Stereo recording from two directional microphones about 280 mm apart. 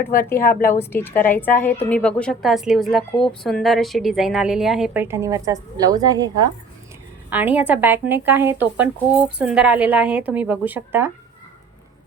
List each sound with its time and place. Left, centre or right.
0.3 s a woman's voice: left
0.7 s a woman's voice: centre